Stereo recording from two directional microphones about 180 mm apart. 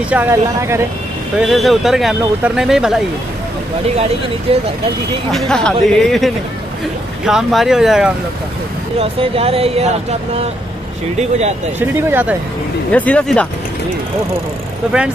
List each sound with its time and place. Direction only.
0.1 s speech: 15° right (ahead or behind)
1.4 s speech: centre (ahead or behind)
4.5 s speech: 35° right (ahead or behind)
5.3 s speech: 5° left (ahead or behind)
9.0 s speech: 30° right (ahead or behind)
12.1 s speech: 10° right (ahead or behind)
12.9 s speech: 10° left (ahead or behind)